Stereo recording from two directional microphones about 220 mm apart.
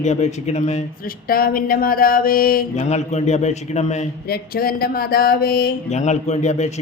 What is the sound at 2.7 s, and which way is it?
A man's voice, 30° left (ahead or behind).